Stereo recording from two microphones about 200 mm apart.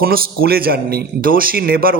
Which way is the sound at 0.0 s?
50° right (ahead or behind).